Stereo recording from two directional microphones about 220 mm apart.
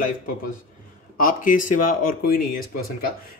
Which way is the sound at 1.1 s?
40° left (ahead or behind).